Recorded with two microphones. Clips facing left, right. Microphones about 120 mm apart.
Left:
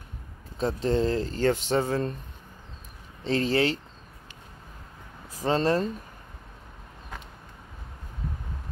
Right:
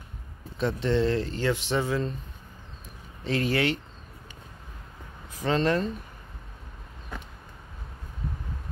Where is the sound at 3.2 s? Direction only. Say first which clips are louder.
Left 2 dB; 30° left (ahead or behind).